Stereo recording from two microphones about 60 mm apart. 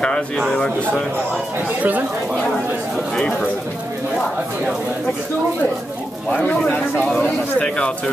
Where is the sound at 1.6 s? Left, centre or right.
Right.